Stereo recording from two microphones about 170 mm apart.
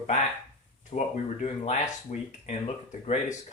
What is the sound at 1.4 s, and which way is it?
Speech, 40° left (ahead or behind).